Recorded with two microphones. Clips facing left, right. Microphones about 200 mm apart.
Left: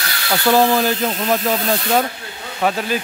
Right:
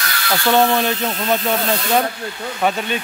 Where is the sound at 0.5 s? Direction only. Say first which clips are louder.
Left 1 dB; centre (ahead or behind).